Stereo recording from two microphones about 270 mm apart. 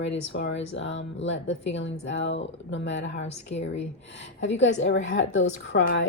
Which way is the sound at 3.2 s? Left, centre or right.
Left.